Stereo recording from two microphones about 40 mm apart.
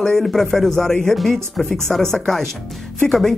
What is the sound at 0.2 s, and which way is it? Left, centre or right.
Speech, centre.